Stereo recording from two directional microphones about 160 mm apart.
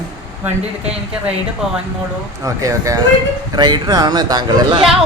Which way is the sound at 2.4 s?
20° right (ahead or behind).